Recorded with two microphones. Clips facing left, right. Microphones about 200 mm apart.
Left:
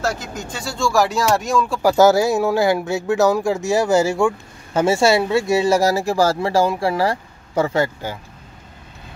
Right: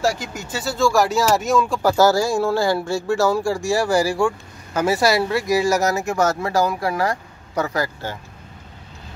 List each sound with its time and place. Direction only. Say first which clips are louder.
0.0 s speech: right 2 dB; 10° right (ahead or behind)
1.8 s speech: left 5 dB; 15° left (ahead or behind)